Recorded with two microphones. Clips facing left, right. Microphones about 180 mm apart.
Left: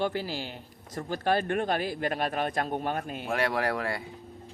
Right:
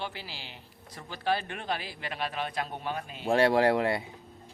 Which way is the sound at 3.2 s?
30° right (ahead or behind).